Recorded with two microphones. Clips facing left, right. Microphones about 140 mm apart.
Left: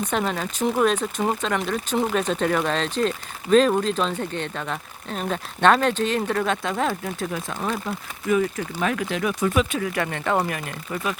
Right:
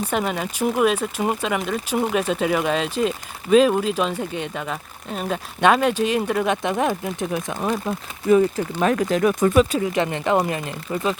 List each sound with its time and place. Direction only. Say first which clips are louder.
0.1 s speech: right 1 dB; 5° right (ahead or behind)
8.3 s speech: right 5 dB; 30° right (ahead or behind)
9.7 s speech: right 4 dB; 20° right (ahead or behind)